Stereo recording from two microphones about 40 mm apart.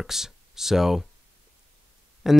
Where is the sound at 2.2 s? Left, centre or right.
Centre.